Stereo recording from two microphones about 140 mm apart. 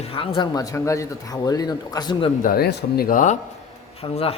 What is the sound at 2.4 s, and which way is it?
Speech, 90° left.